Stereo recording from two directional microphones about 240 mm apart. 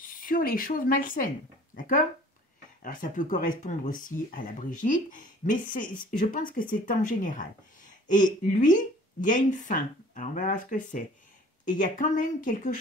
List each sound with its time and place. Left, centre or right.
0.0 s a woman's voice: left